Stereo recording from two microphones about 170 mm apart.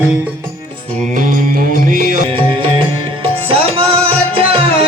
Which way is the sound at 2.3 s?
30° right (ahead or behind).